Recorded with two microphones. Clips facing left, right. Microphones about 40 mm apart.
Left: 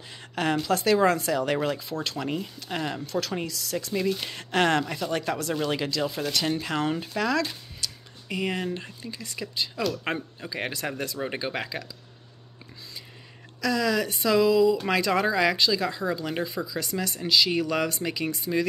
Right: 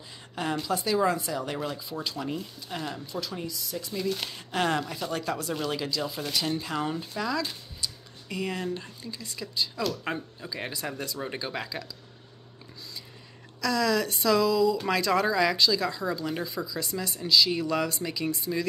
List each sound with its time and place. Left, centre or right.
0.1 s speech: left
4.3 s speech: left
5.5 s speech: left
5.8 s speech: left
7.2 s a sound: left
8.6 s speech: left
11.1 s speech: left
13.6 s speech: left